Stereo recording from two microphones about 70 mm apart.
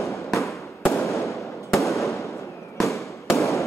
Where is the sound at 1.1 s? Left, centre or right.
Left.